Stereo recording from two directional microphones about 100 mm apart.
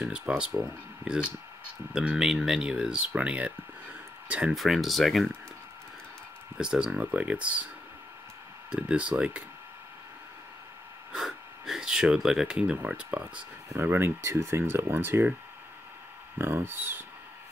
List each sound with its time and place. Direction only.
0.0 s speech: 10° right (ahead or behind)
4.6 s speech: centre (ahead or behind)
6.6 s speech: 10° right (ahead or behind)
8.7 s speech: 10° right (ahead or behind)
11.1 s speech: 5° right (ahead or behind)
13.7 s speech: 25° right (ahead or behind)
16.3 s speech: 25° right (ahead or behind)